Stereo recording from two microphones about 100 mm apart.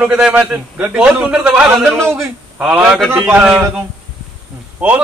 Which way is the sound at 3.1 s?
20° right (ahead or behind).